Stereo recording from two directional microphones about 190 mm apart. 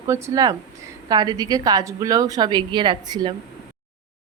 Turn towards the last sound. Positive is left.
turn(degrees=-25)  # may be behind; listen again after turning